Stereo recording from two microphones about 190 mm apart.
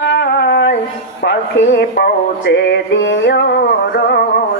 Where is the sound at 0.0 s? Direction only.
65° left (ahead or behind).